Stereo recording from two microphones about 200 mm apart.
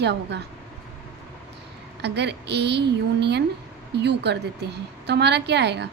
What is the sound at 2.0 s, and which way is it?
Speech, 60° right (ahead or behind).